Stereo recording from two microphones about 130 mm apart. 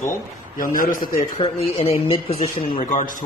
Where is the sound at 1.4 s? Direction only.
50° left (ahead or behind).